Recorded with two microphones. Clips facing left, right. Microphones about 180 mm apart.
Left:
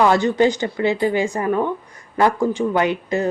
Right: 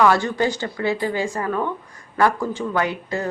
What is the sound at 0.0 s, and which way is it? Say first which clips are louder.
Speech: left 3 dB; 20° left (ahead or behind).